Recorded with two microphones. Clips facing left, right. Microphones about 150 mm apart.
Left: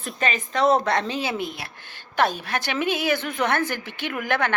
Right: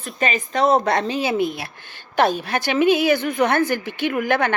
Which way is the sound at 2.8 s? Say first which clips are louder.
Right 8 dB; 50° left (ahead or behind).